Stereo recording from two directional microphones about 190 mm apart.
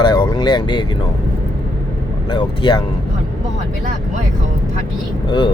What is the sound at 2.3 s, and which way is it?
Speech, 25° left (ahead or behind).